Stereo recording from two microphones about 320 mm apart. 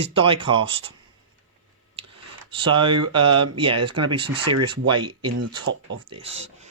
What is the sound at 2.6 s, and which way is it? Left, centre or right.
Speech, centre.